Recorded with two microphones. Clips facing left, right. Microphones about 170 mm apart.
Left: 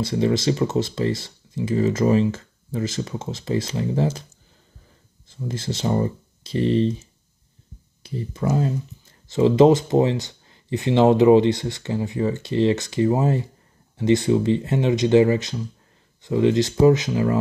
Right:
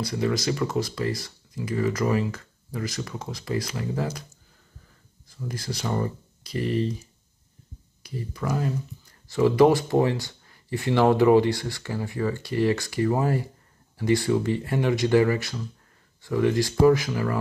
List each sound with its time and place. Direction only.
0.0 s speech: 25° left (ahead or behind)
5.3 s speech: 25° left (ahead or behind)